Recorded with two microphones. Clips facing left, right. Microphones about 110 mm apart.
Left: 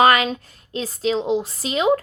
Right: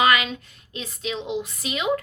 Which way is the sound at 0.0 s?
40° left (ahead or behind).